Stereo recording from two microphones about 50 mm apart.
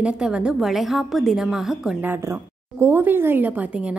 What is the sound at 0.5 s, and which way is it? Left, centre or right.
A woman's voice, centre.